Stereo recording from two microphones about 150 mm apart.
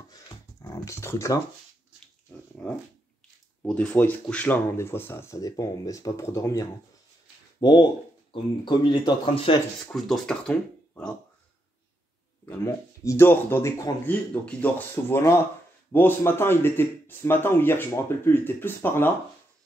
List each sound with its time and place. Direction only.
0.1 s a sound: 25° left (ahead or behind)
2.6 s dog: 10° left (ahead or behind)
3.6 s speech: 10° left (ahead or behind); by 9.6 s 35° left (ahead or behind)
9.8 s speech: centre (ahead or behind)
12.4 s speech: 20° left (ahead or behind)